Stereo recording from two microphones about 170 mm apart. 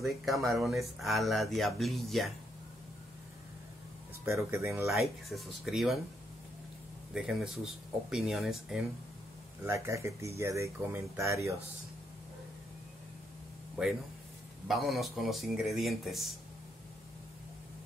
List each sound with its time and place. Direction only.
0.0 s speech: centre (ahead or behind)
4.2 s speech: 15° right (ahead or behind)
4.9 s speech: centre (ahead or behind)
7.2 s speech: centre (ahead or behind)
9.6 s speech: 15° right (ahead or behind)
14.7 s speech: centre (ahead or behind)